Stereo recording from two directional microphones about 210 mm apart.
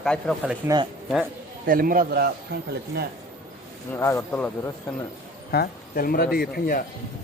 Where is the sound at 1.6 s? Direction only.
40° right (ahead or behind).